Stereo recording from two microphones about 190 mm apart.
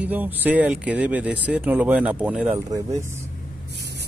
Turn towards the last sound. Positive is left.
turn(degrees=-20)  # may be behind; listen again after turning